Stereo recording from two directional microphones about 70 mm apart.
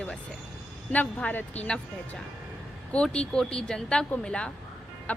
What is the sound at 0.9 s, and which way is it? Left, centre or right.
Speech, left.